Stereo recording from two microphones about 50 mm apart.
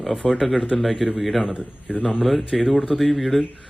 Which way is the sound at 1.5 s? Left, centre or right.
Left.